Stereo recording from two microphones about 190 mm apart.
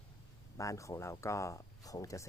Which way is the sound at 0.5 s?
15° left (ahead or behind).